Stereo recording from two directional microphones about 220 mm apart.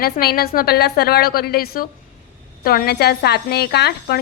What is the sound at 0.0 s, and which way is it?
A woman's voice, 45° left (ahead or behind).